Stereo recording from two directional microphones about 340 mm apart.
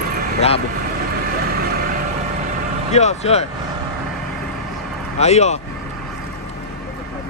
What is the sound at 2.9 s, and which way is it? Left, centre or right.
Speech, centre.